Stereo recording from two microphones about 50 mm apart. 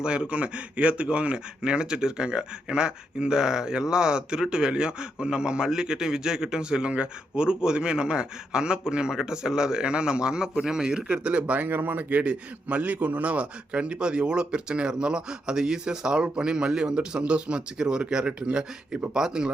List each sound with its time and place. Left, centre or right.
0.0 s speech: right
11.6 s a man's voice: right; by 19.5 s centre